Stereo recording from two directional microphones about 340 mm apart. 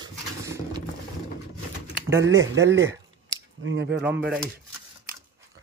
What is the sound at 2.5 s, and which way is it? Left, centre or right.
Speech, right.